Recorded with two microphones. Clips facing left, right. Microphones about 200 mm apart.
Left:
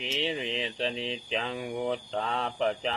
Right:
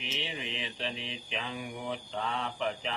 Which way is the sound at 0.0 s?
30° left (ahead or behind).